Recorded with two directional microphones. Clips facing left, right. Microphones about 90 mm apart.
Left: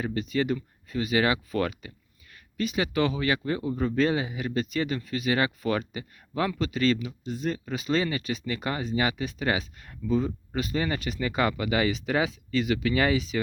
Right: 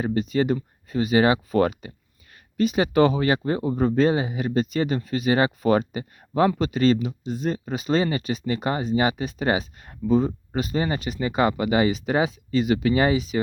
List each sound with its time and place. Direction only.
0.0 s speech: 30° right (ahead or behind)